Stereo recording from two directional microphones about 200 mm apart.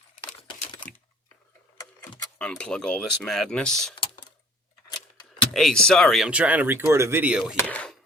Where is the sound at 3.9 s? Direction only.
25° left (ahead or behind).